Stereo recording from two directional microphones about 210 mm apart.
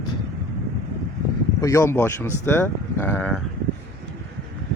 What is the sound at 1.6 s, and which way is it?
Speech, 15° left (ahead or behind).